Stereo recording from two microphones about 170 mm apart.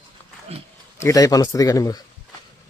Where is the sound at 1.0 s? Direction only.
20° left (ahead or behind).